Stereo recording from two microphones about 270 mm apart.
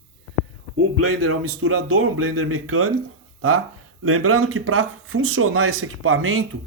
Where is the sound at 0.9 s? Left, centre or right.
Right.